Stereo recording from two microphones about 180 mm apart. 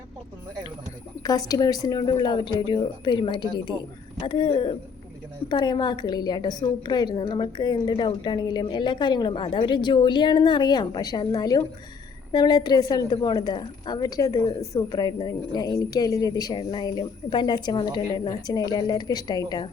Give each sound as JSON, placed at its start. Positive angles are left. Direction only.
{"t": 1.2, "sound": "a woman's voice", "side_deg": 20}